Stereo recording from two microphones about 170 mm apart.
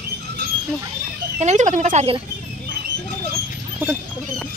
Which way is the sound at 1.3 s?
45° right (ahead or behind).